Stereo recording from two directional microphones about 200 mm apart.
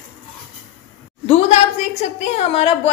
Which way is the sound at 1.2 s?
30° left (ahead or behind).